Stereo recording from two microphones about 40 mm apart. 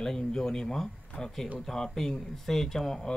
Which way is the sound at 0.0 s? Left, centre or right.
Centre.